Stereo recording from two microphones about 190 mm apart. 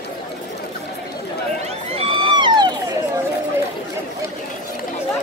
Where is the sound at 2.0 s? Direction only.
25° right (ahead or behind).